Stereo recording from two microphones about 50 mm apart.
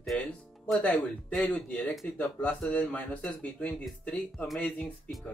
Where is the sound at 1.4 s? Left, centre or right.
Left.